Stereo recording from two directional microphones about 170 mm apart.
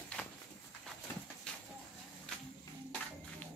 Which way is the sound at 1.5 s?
5° left (ahead or behind).